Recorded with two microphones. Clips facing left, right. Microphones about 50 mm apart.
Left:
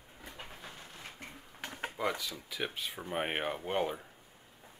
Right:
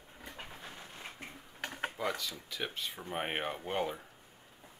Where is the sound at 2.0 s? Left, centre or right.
Centre.